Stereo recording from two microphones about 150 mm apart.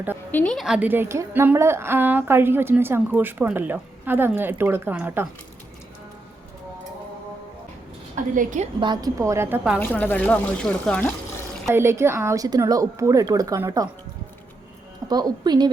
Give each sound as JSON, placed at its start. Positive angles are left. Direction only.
{"t": 0.3, "sound": "speech", "side_deg": 10}
{"t": 0.5, "sound": "a woman's voice", "side_deg": -5}
{"t": 8.1, "sound": "a woman's voice", "side_deg": -55}
{"t": 8.8, "sound": "speech", "side_deg": -30}
{"t": 9.8, "sound": "speech", "side_deg": 10}
{"t": 11.7, "sound": "speech", "side_deg": -15}
{"t": 15.0, "sound": "speech", "side_deg": -25}